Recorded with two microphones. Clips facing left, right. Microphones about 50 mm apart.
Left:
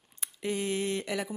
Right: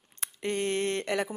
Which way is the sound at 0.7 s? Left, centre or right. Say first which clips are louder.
Right 3 dB; right.